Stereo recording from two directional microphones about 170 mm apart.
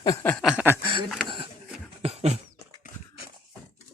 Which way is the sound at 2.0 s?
35° right (ahead or behind).